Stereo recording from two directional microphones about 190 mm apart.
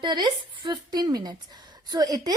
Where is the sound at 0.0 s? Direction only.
25° right (ahead or behind).